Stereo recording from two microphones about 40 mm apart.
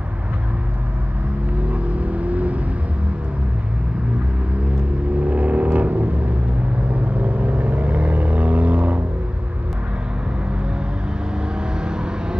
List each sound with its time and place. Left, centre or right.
1.7 s vehicle: right
5.2 s vehicle: right
7.2 s vehicle: right
11.8 s vehicle: right